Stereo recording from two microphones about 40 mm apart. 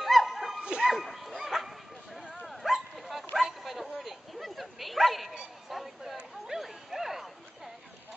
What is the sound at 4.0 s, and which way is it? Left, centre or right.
Dog, centre.